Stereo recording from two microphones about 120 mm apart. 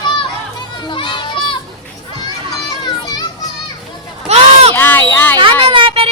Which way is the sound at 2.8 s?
35° left (ahead or behind).